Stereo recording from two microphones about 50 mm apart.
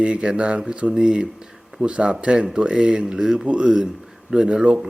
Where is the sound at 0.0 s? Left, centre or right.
Right.